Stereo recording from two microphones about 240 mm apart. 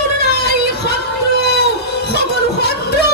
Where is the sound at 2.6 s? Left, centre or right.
Left.